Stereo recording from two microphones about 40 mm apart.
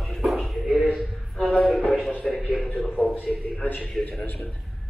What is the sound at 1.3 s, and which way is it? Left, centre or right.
Music, centre.